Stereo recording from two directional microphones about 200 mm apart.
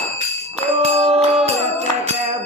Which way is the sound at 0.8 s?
30° right (ahead or behind).